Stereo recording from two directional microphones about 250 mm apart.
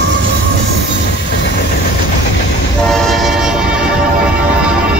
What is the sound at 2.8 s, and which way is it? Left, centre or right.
Train, centre.